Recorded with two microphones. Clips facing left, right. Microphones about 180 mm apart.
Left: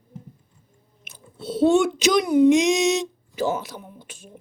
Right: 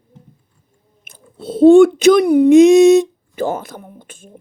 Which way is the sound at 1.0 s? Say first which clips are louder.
Right 4 dB; 50° right (ahead or behind).